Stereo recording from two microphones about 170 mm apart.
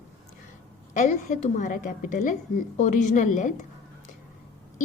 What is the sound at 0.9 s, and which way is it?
A woman's voice, 50° left (ahead or behind).